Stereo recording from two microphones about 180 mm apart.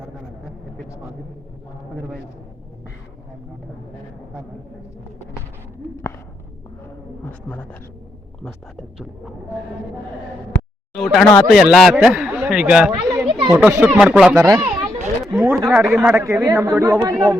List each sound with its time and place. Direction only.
7.3 s speech: 10° left (ahead or behind)
8.7 s a man's voice: centre (ahead or behind)
10.9 s a man's voice: centre (ahead or behind)
13.1 s children playing: 20° right (ahead or behind)
13.5 s speech: 5° right (ahead or behind)